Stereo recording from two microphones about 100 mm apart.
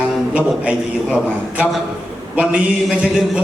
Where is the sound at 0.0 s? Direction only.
10° right (ahead or behind).